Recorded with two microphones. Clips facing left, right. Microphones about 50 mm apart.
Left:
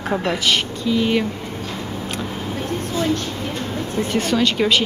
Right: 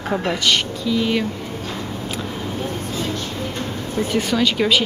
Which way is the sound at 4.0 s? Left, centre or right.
Centre.